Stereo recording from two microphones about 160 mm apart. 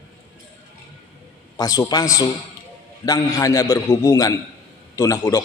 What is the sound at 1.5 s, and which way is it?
A man's voice, 20° left (ahead or behind).